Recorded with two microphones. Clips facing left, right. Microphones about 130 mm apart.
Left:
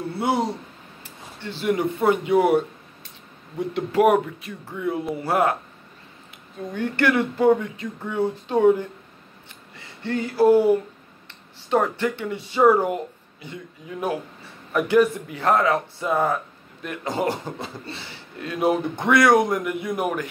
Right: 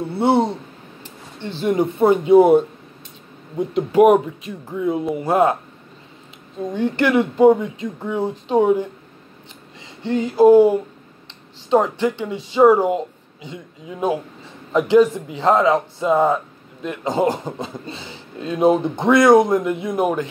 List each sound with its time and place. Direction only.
0.0 s a man's voice: 25° right (ahead or behind)
6.7 s a man's voice: 20° right (ahead or behind)